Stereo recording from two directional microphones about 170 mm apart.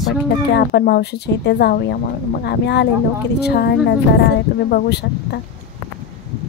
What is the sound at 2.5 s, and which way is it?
Speech, 85° left.